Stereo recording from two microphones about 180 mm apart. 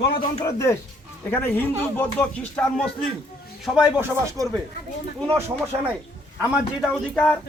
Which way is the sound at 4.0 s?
15° right (ahead or behind).